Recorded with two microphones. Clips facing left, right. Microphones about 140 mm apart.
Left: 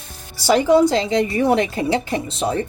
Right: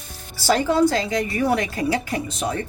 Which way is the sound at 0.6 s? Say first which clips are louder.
Left 5 dB; 20° left (ahead or behind).